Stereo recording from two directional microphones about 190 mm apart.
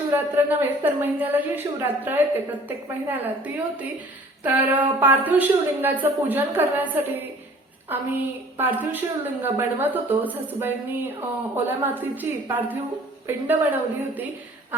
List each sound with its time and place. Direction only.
0.1 s a woman's voice: 10° right (ahead or behind)